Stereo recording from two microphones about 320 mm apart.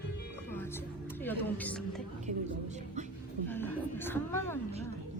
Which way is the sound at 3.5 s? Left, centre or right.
Centre.